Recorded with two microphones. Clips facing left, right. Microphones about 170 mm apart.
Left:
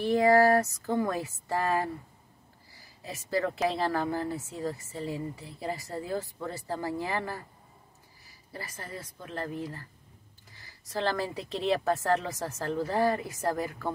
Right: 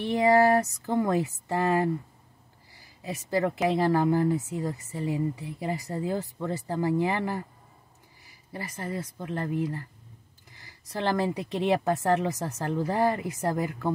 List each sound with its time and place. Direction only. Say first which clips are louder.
0.0 s speech: right 1 dB; 20° right (ahead or behind)
3.6 s speech: right 5 dB; 20° right (ahead or behind)
8.5 s speech: right 7 dB; 20° right (ahead or behind)